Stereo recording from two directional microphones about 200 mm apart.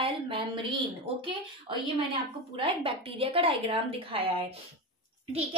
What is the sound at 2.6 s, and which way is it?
A woman's voice, 25° right (ahead or behind).